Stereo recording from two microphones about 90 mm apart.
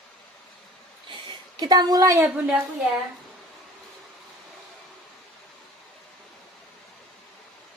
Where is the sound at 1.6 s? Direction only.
45° right (ahead or behind).